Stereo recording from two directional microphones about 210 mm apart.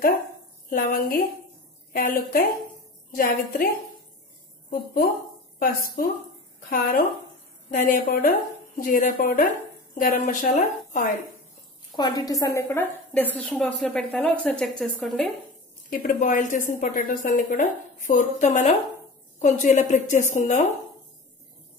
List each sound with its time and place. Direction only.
0.7 s a woman's voice: 40° left (ahead or behind)
4.6 s a woman's voice: 45° left (ahead or behind)
12.0 s a woman's voice: 20° left (ahead or behind); by 15.3 s centre (ahead or behind)
15.9 s a woman's voice: 40° left (ahead or behind)